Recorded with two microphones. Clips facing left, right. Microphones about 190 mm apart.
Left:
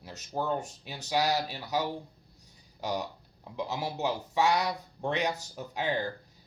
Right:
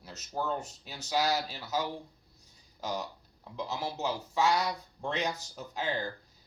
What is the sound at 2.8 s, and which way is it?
Speech, 15° left (ahead or behind).